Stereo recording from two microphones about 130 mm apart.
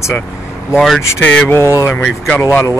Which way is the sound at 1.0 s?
20° left (ahead or behind).